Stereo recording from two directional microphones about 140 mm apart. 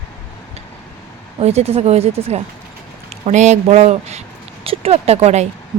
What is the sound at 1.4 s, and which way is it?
Speech, 50° right (ahead or behind).